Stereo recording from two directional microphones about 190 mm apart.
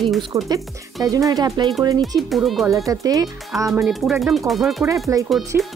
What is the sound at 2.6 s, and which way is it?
Speech, 15° right (ahead or behind).